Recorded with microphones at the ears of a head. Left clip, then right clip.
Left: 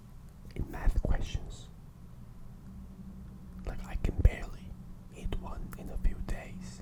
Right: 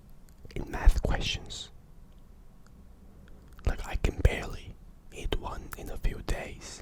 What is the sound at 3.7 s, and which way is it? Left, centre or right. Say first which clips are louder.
Whispering: right 7 dB; right.